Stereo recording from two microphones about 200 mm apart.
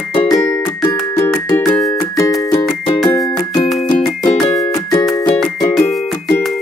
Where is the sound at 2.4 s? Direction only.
15° left (ahead or behind).